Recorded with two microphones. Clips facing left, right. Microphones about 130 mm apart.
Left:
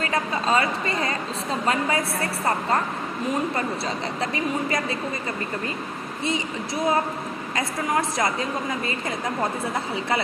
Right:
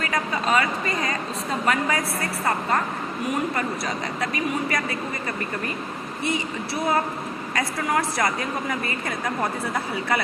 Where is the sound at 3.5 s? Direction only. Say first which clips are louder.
Even; 25° left (ahead or behind).